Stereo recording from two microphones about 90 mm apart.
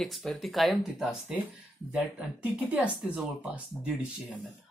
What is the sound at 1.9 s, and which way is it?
Speech, 15° right (ahead or behind).